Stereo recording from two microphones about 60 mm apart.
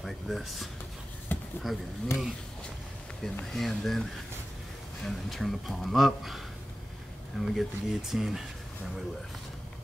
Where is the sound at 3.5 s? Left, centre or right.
Centre.